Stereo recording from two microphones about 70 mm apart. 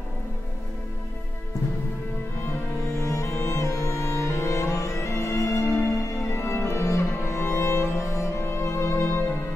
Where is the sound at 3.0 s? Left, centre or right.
Left.